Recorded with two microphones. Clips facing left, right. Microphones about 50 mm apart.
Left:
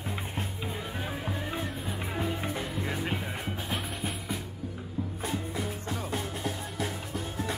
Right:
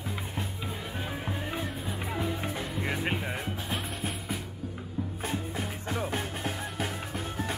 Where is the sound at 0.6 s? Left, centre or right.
Centre.